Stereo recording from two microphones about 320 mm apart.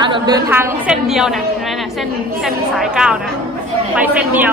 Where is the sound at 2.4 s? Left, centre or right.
Centre.